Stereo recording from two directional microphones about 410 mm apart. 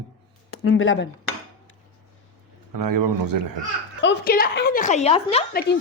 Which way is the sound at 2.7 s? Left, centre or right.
Right.